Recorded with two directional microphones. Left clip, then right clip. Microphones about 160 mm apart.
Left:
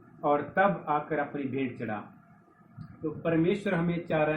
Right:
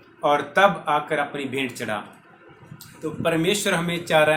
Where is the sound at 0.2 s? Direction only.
40° right (ahead or behind).